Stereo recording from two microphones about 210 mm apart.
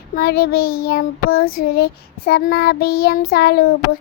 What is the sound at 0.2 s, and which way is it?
Child singing, 50° left (ahead or behind).